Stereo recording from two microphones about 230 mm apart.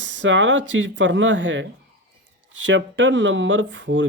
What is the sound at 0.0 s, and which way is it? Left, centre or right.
Speech, right.